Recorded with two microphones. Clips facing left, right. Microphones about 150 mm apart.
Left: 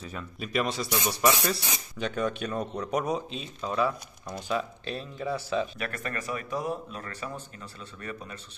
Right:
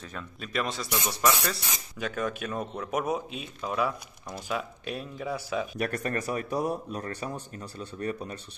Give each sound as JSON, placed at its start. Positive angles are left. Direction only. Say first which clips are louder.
{"t": 0.0, "sound": "speech", "louder": "left 2 dB", "side_deg": 5}
{"t": 5.8, "sound": "speech", "louder": "right 5 dB", "side_deg": -40}